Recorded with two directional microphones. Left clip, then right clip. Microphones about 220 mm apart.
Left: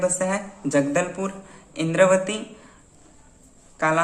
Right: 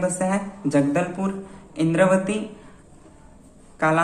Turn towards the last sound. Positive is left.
turn(degrees=10)  # may be behind; listen again after turning